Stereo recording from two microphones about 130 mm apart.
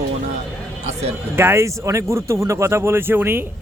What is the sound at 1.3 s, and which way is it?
Speech, 20° right (ahead or behind).